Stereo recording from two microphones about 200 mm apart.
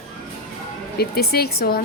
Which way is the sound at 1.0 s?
50° left (ahead or behind).